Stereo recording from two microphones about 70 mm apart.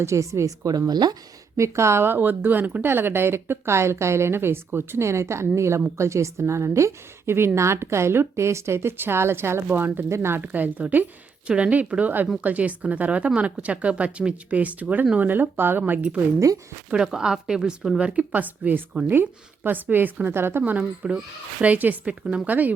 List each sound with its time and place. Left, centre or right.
0.0 s speech: right
1.5 s a woman's voice: right
10.4 s speech: right
16.9 s a woman's voice: centre